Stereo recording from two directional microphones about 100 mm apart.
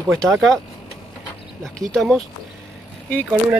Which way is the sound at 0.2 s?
5° left (ahead or behind).